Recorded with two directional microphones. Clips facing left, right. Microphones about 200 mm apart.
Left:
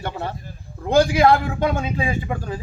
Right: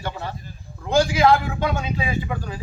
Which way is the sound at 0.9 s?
55° left (ahead or behind).